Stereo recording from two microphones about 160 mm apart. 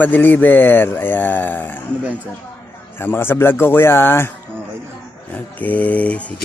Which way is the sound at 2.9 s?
15° left (ahead or behind).